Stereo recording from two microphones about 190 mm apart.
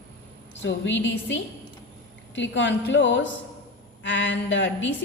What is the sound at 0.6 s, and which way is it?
A woman's voice, 75° left (ahead or behind).